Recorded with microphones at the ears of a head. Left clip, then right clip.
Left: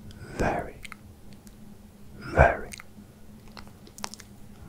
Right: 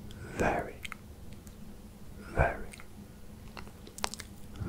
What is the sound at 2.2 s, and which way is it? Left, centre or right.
Whispering, left.